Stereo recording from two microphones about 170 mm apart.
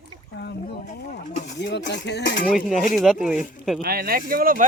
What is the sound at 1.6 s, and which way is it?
Speech, 90° left.